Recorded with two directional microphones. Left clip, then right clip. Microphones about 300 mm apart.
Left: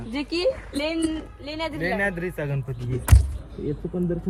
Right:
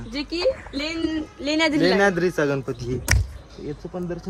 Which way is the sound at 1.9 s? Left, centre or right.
Centre.